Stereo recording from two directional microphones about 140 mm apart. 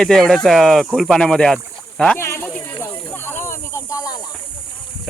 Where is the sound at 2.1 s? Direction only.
20° left (ahead or behind).